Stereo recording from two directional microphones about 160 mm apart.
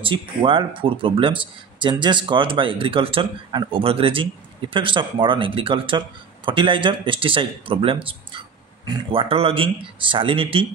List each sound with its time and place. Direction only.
0.0 s speech: 30° right (ahead or behind)